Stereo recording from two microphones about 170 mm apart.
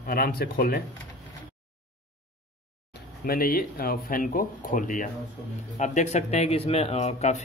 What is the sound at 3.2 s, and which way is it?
Speech, 60° left (ahead or behind).